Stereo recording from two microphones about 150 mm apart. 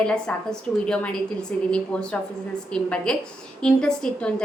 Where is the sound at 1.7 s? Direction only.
5° left (ahead or behind).